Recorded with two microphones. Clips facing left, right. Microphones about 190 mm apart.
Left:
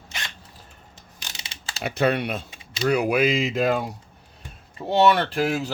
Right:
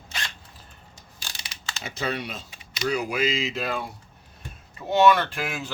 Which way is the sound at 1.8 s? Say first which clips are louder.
Left 8 dB; 60° left (ahead or behind).